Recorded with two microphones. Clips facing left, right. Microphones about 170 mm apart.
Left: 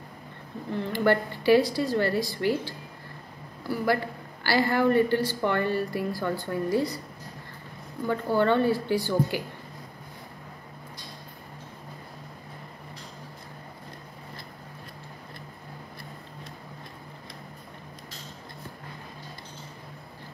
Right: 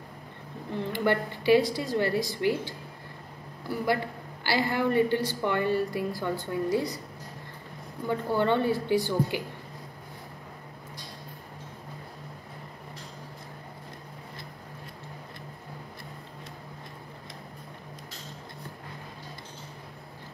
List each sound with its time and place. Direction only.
0.9 s a man's voice: 20° right (ahead or behind)
3.8 s a man's voice: 20° right (ahead or behind)
8.1 s a man's voice: 20° right (ahead or behind)